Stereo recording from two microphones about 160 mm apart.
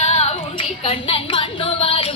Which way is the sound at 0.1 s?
40° left (ahead or behind).